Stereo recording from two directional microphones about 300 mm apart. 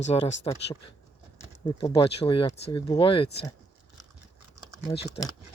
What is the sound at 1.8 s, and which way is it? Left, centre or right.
Speech, centre.